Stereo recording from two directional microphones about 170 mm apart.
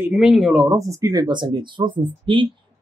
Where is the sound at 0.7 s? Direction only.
20° right (ahead or behind).